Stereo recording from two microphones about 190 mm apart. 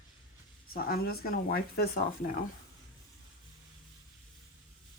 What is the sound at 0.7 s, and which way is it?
Speech, 50° left (ahead or behind).